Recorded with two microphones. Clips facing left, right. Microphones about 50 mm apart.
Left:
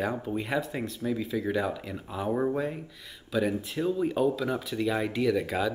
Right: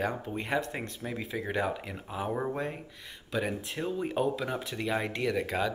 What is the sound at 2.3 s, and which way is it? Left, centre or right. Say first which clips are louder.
Speech: left 4 dB; centre.